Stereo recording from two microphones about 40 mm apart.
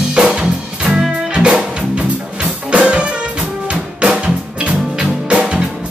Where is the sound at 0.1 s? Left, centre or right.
Centre.